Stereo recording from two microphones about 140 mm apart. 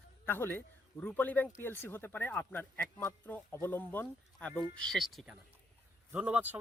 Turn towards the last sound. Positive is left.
turn(degrees=-10)  # may be behind; listen again after turning